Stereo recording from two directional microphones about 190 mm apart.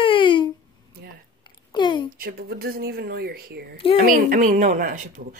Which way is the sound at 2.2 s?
50° right (ahead or behind).